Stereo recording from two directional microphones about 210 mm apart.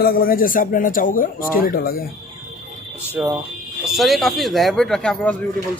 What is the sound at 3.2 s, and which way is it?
Speech, 5° right (ahead or behind).